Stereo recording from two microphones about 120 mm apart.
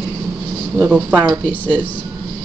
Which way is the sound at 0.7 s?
10° right (ahead or behind).